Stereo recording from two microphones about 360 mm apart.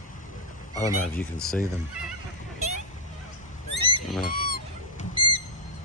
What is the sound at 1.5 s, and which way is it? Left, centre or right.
Speech, centre.